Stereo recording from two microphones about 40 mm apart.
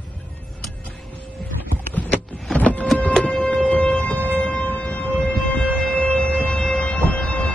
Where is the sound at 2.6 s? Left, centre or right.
Left.